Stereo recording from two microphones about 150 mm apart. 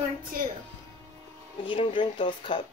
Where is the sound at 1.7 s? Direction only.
35° left (ahead or behind).